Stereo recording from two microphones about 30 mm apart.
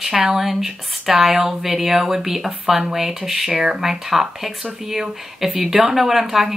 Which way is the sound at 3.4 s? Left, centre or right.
Right.